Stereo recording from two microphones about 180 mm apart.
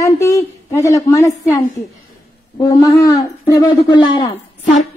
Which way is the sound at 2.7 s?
20° left (ahead or behind).